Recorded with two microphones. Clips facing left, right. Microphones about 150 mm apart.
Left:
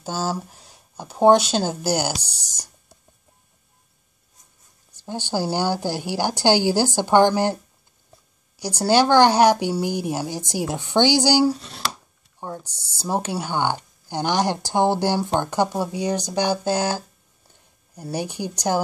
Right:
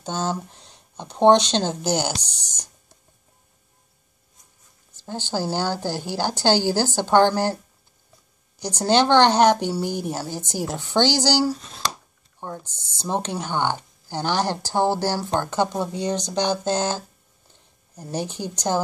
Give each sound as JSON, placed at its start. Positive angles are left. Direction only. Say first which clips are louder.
{"t": 0.0, "sound": "speech", "louder": "even", "side_deg": 5}
{"t": 4.9, "sound": "speech", "louder": "left 2 dB", "side_deg": 15}
{"t": 8.5, "sound": "speech", "louder": "left 1 dB", "side_deg": 10}
{"t": 17.5, "sound": "a sound", "louder": "even", "side_deg": 10}